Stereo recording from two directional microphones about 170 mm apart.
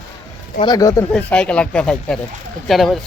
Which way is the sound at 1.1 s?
5° left (ahead or behind).